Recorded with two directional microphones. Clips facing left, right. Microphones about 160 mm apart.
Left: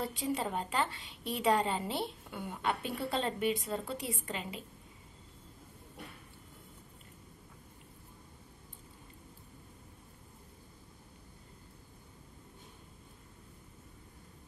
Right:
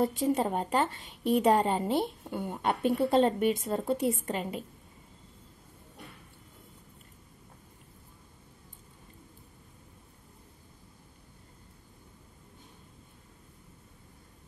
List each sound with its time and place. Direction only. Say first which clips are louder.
0.0 s a woman's voice: right 8 dB; 45° right (ahead or behind)